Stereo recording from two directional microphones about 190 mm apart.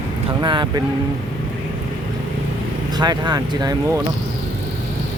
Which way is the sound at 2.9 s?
20° right (ahead or behind).